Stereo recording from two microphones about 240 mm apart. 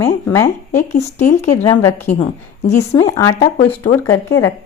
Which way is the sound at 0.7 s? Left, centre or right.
Left.